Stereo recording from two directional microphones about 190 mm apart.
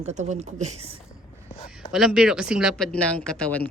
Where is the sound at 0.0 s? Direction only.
35° right (ahead or behind).